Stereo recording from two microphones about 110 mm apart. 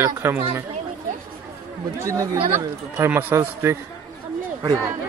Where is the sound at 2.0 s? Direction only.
30° right (ahead or behind).